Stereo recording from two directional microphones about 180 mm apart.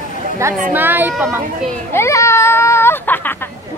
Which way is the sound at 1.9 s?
15° left (ahead or behind).